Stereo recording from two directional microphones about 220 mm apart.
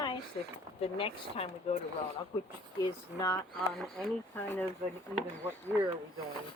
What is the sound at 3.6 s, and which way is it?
Speech, centre (ahead or behind).